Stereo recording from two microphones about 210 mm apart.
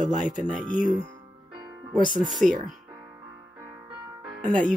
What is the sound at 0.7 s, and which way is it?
Speech, 40° left (ahead or behind).